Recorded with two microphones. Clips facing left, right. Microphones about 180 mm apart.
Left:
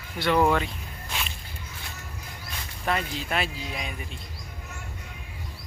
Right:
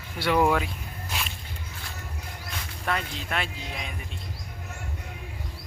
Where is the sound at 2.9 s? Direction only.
5° left (ahead or behind).